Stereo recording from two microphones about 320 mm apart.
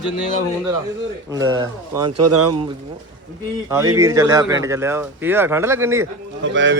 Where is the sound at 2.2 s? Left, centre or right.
Right.